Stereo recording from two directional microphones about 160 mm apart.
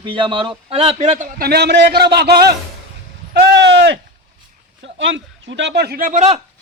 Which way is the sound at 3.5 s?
90° right.